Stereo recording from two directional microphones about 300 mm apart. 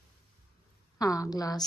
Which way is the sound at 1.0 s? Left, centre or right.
Centre.